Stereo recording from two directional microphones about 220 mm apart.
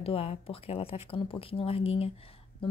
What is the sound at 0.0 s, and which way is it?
Speech, 25° left (ahead or behind).